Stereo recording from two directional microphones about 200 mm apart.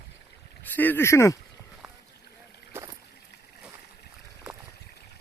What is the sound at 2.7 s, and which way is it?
Boat, 15° right (ahead or behind).